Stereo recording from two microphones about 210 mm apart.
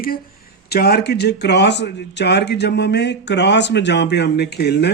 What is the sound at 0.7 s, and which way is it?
A man's voice, 50° left (ahead or behind).